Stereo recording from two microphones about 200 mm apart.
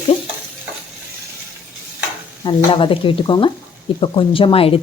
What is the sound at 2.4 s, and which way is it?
Speech, 25° left (ahead or behind).